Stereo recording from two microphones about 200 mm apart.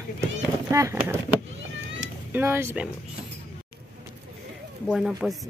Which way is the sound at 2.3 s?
10° right (ahead or behind).